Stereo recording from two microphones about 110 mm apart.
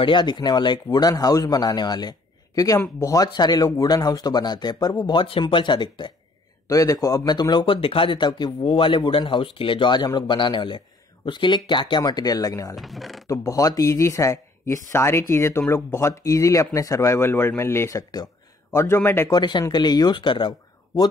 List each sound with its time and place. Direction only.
0.0 s a man's voice: 45° left (ahead or behind)
6.7 s a man's voice: 30° left (ahead or behind)
12.7 s speech: centre (ahead or behind)
13.3 s speech: 30° left (ahead or behind)
19.3 s a man's voice: 40° left (ahead or behind)